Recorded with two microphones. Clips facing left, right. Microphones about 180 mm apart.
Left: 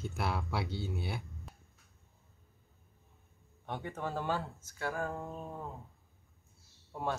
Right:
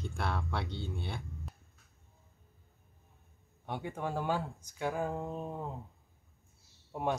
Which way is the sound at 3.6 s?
10° right (ahead or behind).